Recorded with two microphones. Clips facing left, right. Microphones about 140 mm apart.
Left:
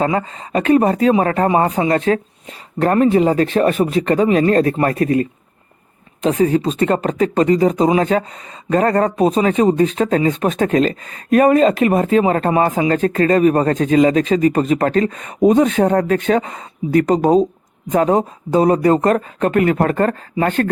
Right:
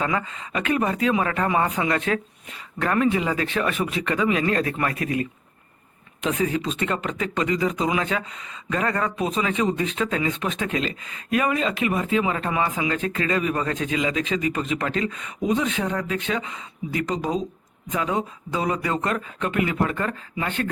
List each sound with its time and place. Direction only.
0.0 s speech: 35° left (ahead or behind)